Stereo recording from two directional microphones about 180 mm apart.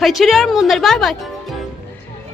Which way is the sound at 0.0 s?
Centre (ahead or behind).